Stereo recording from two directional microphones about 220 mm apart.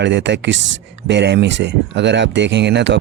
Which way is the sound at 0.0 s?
55° right (ahead or behind).